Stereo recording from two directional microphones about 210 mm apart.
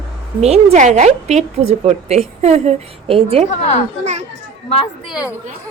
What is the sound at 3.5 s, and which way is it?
Speech, 30° left (ahead or behind).